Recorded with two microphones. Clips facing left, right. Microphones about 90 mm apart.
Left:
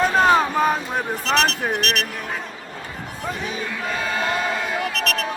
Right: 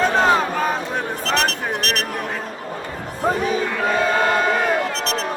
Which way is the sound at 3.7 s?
55° right (ahead or behind).